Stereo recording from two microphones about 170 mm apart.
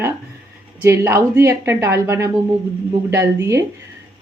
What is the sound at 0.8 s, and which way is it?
A woman's voice, 15° right (ahead or behind).